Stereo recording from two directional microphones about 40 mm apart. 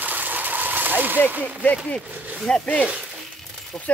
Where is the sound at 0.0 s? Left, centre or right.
Right.